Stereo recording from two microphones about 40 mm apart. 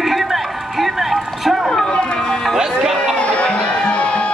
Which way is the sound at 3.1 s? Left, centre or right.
Left.